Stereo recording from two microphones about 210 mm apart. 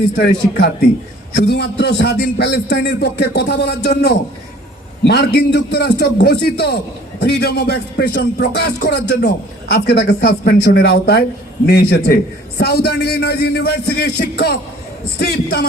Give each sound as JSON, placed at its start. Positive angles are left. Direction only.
{"t": 0.2, "sound": "a man's voice", "side_deg": 50}